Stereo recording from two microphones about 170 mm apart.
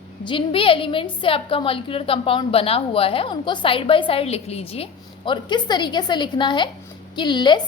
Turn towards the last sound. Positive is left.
turn(degrees=25)  # may be behind; listen again after turning